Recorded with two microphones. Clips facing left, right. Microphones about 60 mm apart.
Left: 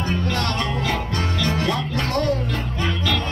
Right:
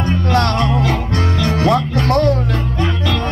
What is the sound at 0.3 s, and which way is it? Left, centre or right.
Music, right.